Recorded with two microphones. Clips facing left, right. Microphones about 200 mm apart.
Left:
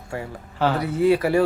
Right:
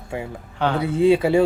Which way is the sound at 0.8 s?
25° right (ahead or behind).